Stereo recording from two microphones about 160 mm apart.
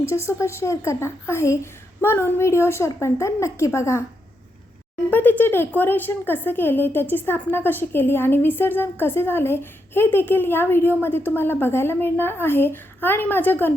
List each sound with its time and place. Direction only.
0.3 s speech: 15° left (ahead or behind)
5.1 s speech: 10° left (ahead or behind)